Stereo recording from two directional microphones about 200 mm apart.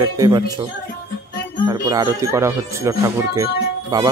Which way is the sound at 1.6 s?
20° right (ahead or behind).